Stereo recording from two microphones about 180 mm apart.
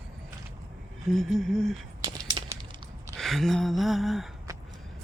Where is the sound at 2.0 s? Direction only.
25° right (ahead or behind).